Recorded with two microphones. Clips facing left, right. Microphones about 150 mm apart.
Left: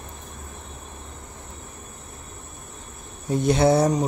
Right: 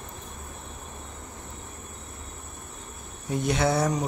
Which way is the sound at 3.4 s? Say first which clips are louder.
Left 6 dB; 35° left (ahead or behind).